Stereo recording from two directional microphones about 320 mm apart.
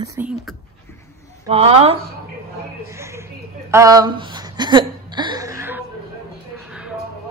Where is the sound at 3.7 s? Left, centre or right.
Centre.